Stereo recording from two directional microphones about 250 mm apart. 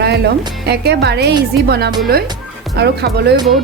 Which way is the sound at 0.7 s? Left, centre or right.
Right.